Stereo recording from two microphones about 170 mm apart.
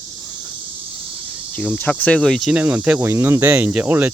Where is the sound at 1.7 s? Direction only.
10° left (ahead or behind).